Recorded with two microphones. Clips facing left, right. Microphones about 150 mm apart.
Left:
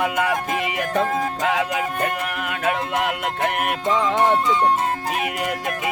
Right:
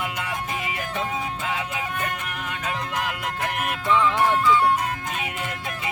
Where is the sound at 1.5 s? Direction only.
85° left.